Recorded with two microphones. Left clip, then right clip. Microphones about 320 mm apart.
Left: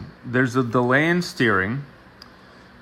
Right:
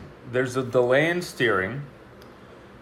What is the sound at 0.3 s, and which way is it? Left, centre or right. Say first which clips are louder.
Speech: left 4 dB; left.